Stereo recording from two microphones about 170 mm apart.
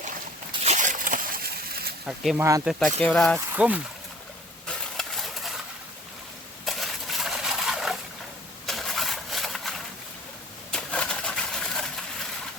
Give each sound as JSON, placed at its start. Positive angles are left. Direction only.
{"t": 0.6, "sound": "a sound", "side_deg": -45}
{"t": 2.0, "sound": "speech", "side_deg": 0}
{"t": 2.4, "sound": "speech", "side_deg": -20}
{"t": 2.6, "sound": "speech", "side_deg": 0}
{"t": 3.3, "sound": "speech", "side_deg": -10}
{"t": 4.9, "sound": "stir", "side_deg": 0}
{"t": 6.7, "sound": "a sound", "side_deg": 0}